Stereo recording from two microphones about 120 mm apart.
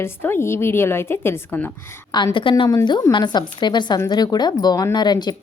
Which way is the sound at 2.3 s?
45° left (ahead or behind).